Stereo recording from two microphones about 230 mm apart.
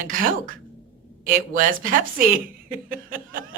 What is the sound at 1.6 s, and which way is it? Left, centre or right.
Speech, right.